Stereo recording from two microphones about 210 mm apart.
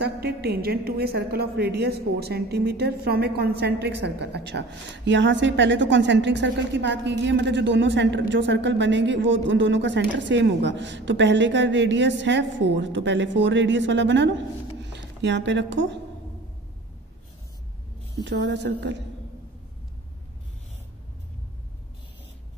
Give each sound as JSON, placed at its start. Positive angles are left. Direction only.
{"t": 0.0, "sound": "a woman's voice", "side_deg": -50}
{"t": 18.2, "sound": "a woman's voice", "side_deg": -55}